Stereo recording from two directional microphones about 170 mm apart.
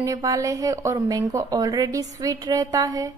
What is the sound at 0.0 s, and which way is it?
Speech, 20° right (ahead or behind).